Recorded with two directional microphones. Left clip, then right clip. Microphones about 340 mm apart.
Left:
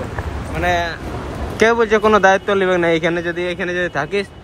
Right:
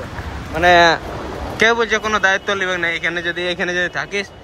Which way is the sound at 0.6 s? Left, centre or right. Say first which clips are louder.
Right 8 dB; right.